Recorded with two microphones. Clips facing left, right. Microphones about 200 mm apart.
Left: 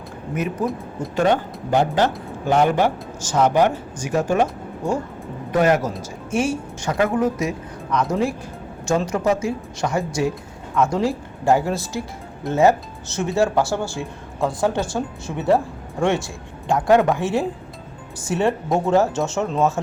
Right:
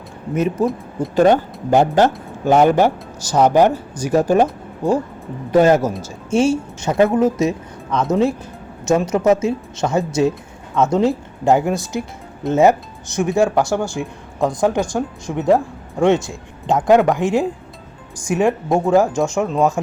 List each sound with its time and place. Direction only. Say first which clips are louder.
0.3 s speech: right 6 dB; 25° right (ahead or behind)
1.1 s speech: right 5 dB; 40° right (ahead or behind)
5.5 s a man's voice: right 5 dB; 30° right (ahead or behind)